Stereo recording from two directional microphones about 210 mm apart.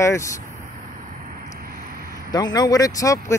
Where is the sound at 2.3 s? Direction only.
20° left (ahead or behind).